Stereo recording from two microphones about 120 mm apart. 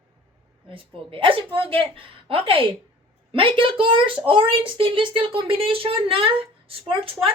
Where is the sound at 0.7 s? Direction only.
45° right (ahead or behind).